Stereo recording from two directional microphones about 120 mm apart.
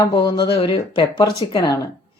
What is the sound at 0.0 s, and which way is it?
Speech, 35° left (ahead or behind).